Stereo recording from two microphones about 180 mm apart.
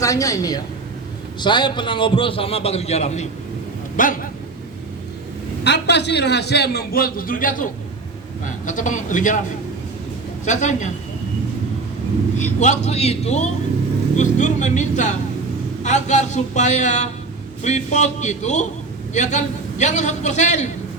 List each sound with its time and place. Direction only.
0.0 s a man's voice: 20° left (ahead or behind); by 3.2 s 35° left (ahead or behind)
3.9 s a man's voice: 50° left (ahead or behind)
5.6 s a man's voice: 70° left (ahead or behind); by 9.4 s 45° left (ahead or behind)
10.4 s a man's voice: 40° left (ahead or behind)
12.4 s a man's voice: 40° left (ahead or behind)